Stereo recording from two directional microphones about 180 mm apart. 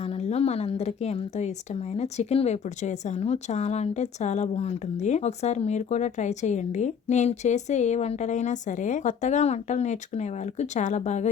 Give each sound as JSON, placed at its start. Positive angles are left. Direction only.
{"t": 0.0, "sound": "a woman's voice", "side_deg": 35}